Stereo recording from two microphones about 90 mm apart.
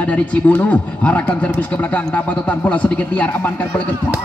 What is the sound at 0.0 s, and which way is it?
A man's voice, 15° left (ahead or behind).